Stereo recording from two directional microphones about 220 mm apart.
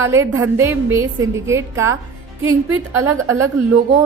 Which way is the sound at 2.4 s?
75° right (ahead or behind).